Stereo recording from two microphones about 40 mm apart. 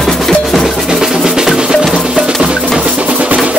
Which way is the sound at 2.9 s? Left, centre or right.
Right.